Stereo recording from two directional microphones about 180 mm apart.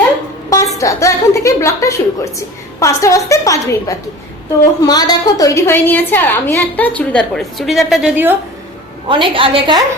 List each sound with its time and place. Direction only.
0.5 s a sound: 20° left (ahead or behind)
2.8 s a woman's voice: 15° left (ahead or behind); by 8.4 s 10° right (ahead or behind)
9.0 s a woman's voice: 30° right (ahead or behind)